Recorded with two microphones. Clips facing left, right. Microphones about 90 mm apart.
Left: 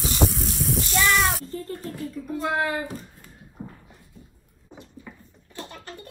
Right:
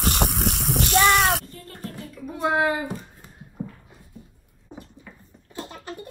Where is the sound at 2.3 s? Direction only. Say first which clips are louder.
Right 3 dB; 15° right (ahead or behind).